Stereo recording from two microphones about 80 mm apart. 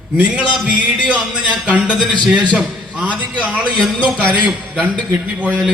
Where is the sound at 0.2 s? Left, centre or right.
Centre.